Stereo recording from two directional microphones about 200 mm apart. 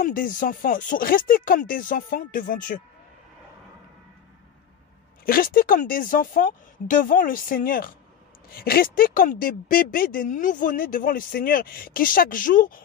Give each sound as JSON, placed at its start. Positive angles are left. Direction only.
{"t": 0.0, "sound": "speech", "side_deg": 40}
{"t": 5.2, "sound": "speech", "side_deg": 45}